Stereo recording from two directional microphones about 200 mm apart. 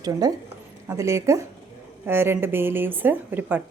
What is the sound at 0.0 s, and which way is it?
A woman's voice, 20° right (ahead or behind).